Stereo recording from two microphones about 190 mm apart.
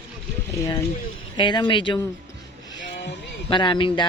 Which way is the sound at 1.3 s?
25° left (ahead or behind).